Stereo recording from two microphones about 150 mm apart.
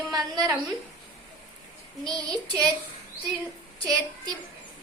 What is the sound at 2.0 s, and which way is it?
Speech, 5° left (ahead or behind).